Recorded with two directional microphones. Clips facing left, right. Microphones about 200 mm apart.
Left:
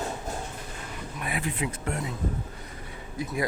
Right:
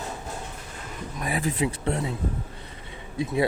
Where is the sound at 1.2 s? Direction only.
35° right (ahead or behind).